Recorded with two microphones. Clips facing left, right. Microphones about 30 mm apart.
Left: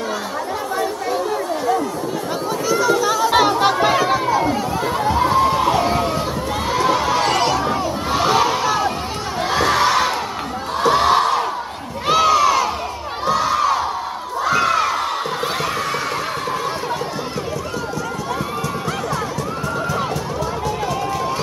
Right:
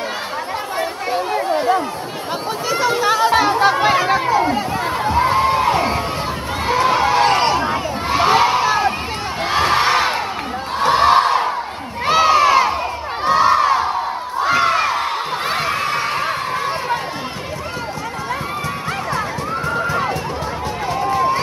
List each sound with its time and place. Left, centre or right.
0.7 s chatter: right
3.4 s chatter: right
4.3 s chatter: right
5.1 s a sound: right
6.7 s crowd: right
8.1 s crowd: right
12.1 s crowd: right
15.5 s a sound: right